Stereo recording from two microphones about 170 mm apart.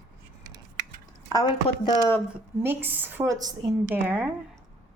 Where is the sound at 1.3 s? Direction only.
25° left (ahead or behind).